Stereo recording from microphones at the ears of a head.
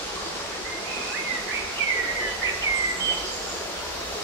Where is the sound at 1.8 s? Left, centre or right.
Right.